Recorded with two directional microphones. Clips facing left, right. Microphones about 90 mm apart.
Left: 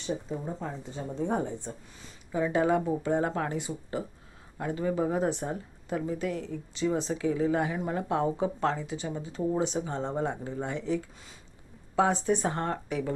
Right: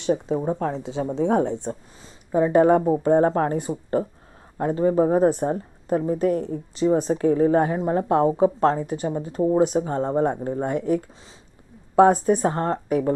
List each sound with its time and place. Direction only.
0.0 s speech: 70° right (ahead or behind)
2.0 s a woman's voice: 40° right (ahead or behind)